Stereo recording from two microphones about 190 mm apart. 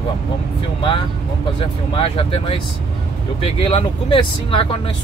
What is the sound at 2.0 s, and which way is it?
Speech, 30° left (ahead or behind).